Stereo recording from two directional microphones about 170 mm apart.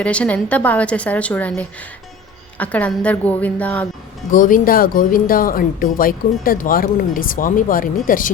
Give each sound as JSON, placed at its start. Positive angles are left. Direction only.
{"t": 0.0, "sound": "a woman's voice", "side_deg": 5}
{"t": 4.3, "sound": "speech", "side_deg": 50}